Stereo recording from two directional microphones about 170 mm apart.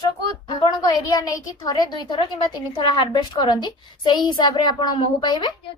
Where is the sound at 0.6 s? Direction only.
25° left (ahead or behind).